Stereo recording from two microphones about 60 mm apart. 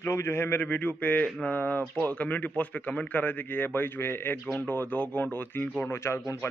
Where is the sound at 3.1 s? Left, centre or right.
Left.